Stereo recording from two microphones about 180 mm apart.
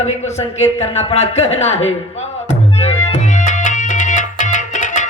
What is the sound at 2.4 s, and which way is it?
Music, 35° left (ahead or behind).